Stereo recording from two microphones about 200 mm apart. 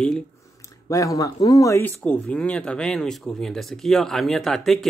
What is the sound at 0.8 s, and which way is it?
Speech, 15° left (ahead or behind).